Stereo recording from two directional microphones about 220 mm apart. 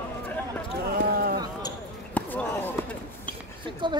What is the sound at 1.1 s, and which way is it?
Basketball bounce, 45° right (ahead or behind).